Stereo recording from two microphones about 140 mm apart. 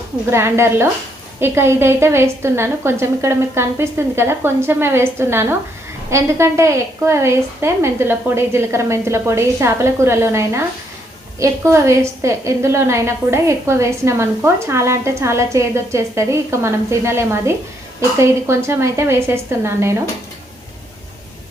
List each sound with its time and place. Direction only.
0.3 s a woman's voice: 20° right (ahead or behind)